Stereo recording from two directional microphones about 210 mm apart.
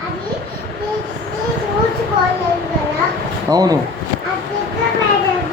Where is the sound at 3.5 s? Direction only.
15° right (ahead or behind).